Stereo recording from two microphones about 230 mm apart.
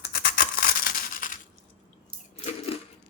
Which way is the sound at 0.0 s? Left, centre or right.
Left.